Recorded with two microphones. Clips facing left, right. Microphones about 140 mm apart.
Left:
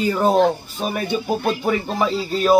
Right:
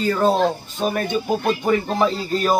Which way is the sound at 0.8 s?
Centre (ahead or behind).